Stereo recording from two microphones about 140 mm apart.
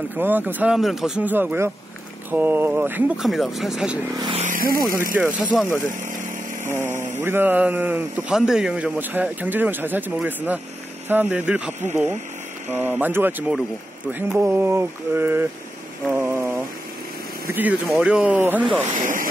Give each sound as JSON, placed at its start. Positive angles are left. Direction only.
{"t": 0.2, "sound": "speech", "side_deg": -15}
{"t": 3.2, "sound": "speech", "side_deg": 0}
{"t": 4.4, "sound": "vehicle", "side_deg": -80}
{"t": 5.2, "sound": "speech", "side_deg": -10}
{"t": 6.0, "sound": "vehicle", "side_deg": -70}
{"t": 6.7, "sound": "speech", "side_deg": -15}
{"t": 16.1, "sound": "a sound", "side_deg": -15}
{"t": 17.5, "sound": "speech", "side_deg": -15}
{"t": 18.9, "sound": "speech", "side_deg": -70}